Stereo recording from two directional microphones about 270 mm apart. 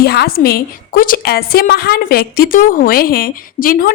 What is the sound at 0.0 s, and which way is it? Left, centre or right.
A woman's voice, left.